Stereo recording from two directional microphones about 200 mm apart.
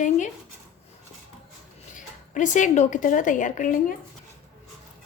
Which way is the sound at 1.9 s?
40° left (ahead or behind).